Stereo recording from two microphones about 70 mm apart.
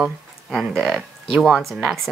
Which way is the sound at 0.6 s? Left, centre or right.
Centre.